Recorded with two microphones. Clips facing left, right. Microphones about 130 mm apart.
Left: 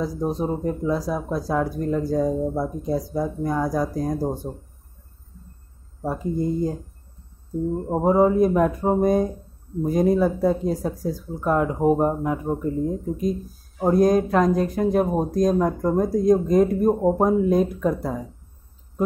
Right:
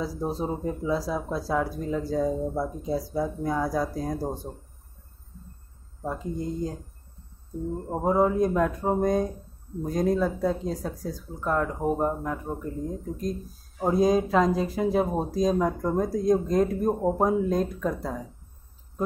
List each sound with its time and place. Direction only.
0.0 s speech: 5° right (ahead or behind)
2.2 s speech: 20° left (ahead or behind)
2.8 s speech: centre (ahead or behind)
7.7 s speech: 20° left (ahead or behind)
8.1 s speech: 5° left (ahead or behind)
11.3 s speech: 15° left (ahead or behind)
16.9 s speech: 15° left (ahead or behind)
17.2 s speech: centre (ahead or behind)